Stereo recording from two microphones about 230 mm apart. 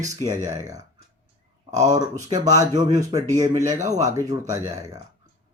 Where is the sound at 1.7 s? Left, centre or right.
Right.